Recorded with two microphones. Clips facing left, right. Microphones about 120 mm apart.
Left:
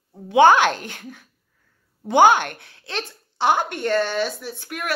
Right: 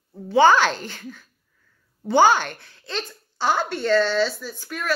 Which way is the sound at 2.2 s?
55° left (ahead or behind).